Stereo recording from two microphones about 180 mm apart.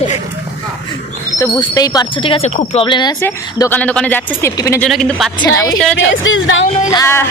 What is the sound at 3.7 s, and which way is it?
Speech, 10° left (ahead or behind).